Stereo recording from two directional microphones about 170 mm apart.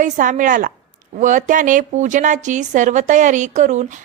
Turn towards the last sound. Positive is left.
turn(degrees=-45)  # may be behind; listen again after turning